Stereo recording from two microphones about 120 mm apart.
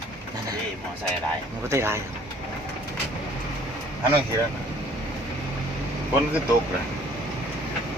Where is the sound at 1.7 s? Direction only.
20° right (ahead or behind).